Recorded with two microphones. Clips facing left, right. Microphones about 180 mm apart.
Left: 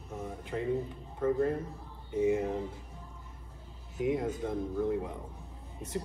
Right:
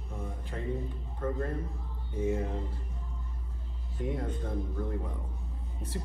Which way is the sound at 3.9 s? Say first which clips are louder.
Left 4 dB; 10° left (ahead or behind).